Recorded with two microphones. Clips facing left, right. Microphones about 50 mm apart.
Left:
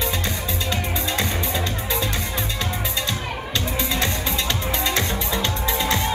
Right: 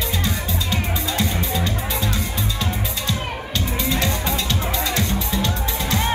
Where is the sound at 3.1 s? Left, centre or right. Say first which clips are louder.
Right 1 dB; left.